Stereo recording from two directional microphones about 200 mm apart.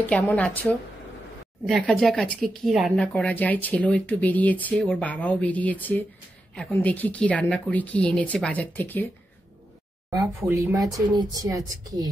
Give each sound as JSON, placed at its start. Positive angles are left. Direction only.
{"t": 0.0, "sound": "speech", "side_deg": 10}
{"t": 1.7, "sound": "speech", "side_deg": 5}
{"t": 10.0, "sound": "speech", "side_deg": -15}